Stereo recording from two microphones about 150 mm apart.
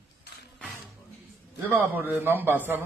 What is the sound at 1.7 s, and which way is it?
Speech, 15° right (ahead or behind).